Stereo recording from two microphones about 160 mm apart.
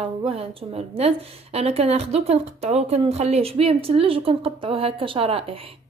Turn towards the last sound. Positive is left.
turn(degrees=-35)  # may be behind; listen again after turning